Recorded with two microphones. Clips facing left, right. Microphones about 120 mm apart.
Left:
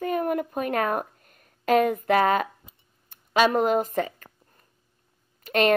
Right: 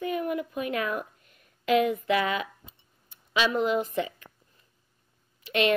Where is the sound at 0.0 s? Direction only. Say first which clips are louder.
Left 4 dB; 45° left (ahead or behind).